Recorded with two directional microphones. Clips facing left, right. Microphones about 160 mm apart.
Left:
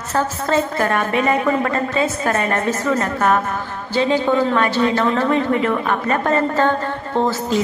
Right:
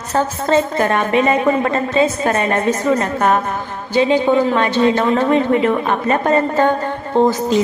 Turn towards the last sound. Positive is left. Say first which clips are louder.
# right 5 dB
turn(degrees=-15)  # may be behind; listen again after turning